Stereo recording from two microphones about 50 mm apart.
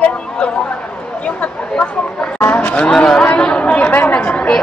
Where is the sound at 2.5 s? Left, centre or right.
Left.